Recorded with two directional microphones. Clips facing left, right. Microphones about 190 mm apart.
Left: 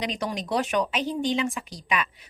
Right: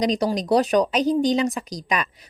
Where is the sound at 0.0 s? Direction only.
35° right (ahead or behind).